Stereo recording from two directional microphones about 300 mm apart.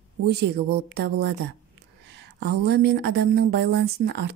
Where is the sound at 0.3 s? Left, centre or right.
Right.